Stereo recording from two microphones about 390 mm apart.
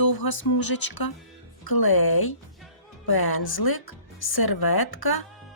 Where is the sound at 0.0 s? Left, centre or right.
Left.